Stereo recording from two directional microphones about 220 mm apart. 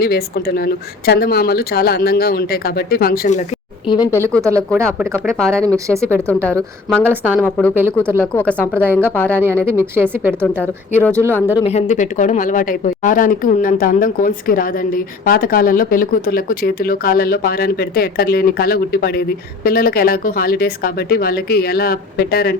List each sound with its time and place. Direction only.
0.0 s speech: 45° left (ahead or behind)
3.8 s a woman's voice: 20° left (ahead or behind)
4.4 s speech: 15° right (ahead or behind)
4.7 s a woman's voice: centre (ahead or behind)
5.4 s a woman's voice: 5° left (ahead or behind)
5.6 s speech: 15° right (ahead or behind)
6.2 s a woman's voice: 5° left (ahead or behind)
9.4 s speech: 10° right (ahead or behind)
10.6 s a woman's voice: 10° left (ahead or behind)
11.6 s speech: 30° left (ahead or behind)